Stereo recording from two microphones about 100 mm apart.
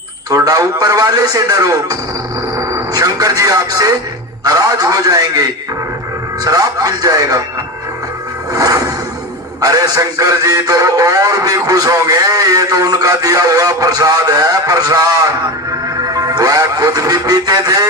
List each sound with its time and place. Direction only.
0.3 s speech: 40° right (ahead or behind)
2.6 s music: 40° right (ahead or behind)
4.4 s speech: 40° right (ahead or behind)
8.5 s music: 35° right (ahead or behind)
9.6 s speech: 40° right (ahead or behind)
16.0 s music: 40° right (ahead or behind)